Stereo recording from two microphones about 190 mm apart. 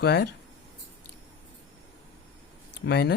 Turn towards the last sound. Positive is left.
turn(degrees=60)  # may be behind; listen again after turning